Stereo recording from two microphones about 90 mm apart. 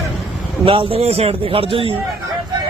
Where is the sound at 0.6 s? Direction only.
80° right.